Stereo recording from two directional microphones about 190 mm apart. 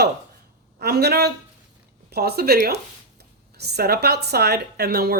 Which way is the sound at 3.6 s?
60° right (ahead or behind).